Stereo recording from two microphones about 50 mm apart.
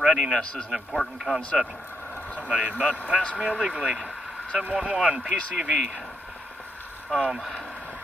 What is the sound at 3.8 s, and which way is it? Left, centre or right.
Speech, centre.